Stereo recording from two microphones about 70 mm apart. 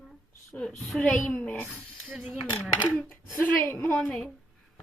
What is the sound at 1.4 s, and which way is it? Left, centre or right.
Speech, left.